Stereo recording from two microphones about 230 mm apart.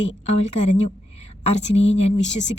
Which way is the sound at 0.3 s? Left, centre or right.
Left.